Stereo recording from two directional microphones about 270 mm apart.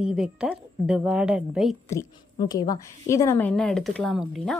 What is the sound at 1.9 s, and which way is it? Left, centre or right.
A woman's voice, centre.